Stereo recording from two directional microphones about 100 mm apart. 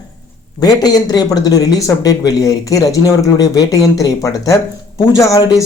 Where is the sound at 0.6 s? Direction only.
40° left (ahead or behind).